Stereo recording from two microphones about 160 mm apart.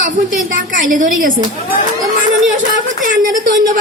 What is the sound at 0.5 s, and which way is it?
Speech, 55° right (ahead or behind).